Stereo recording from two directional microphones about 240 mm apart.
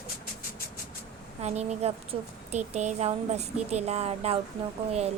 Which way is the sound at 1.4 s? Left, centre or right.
Right.